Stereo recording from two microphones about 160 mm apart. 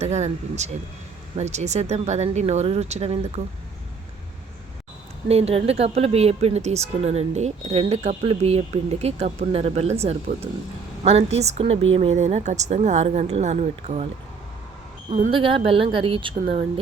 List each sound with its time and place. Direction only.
0.0 s a woman's voice: 45° right (ahead or behind)
5.3 s a woman's voice: 40° right (ahead or behind)
15.3 s speech: 30° right (ahead or behind)